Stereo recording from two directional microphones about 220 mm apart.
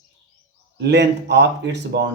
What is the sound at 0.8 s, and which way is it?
Speech, 50° right (ahead or behind).